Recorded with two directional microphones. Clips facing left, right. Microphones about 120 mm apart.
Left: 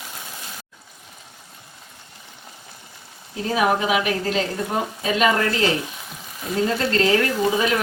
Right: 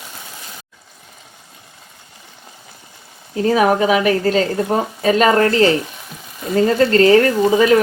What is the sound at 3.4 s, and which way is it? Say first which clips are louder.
A woman's voice: right 6 dB; 45° right (ahead or behind).